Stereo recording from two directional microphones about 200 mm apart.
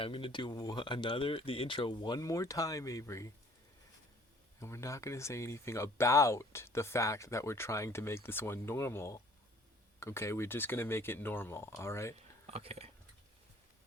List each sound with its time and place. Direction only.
0.0 s speech: 25° left (ahead or behind)
4.6 s speech: 15° left (ahead or behind)
12.5 s speech: 30° right (ahead or behind)